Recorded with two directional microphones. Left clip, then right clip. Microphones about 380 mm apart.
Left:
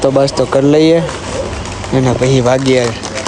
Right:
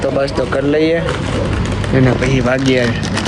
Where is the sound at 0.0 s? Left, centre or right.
Centre.